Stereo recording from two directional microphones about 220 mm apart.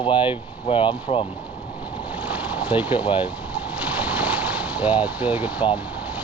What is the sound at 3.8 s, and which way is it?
Boat, 5° right (ahead or behind).